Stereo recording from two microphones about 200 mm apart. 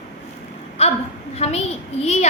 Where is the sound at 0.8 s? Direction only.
30° left (ahead or behind).